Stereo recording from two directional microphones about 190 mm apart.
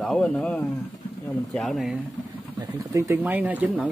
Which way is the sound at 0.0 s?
5° left (ahead or behind).